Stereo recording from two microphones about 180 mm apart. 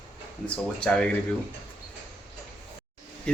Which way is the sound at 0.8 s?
5° left (ahead or behind).